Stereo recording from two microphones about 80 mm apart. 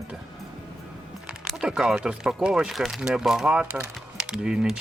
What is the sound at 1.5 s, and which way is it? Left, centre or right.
Speech, centre.